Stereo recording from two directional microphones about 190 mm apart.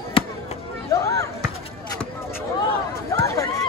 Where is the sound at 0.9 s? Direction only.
15° left (ahead or behind).